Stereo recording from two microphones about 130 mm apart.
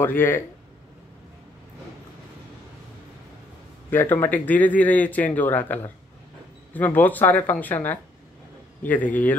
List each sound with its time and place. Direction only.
0.0 s speech: 15° left (ahead or behind)
3.9 s speech: 15° left (ahead or behind)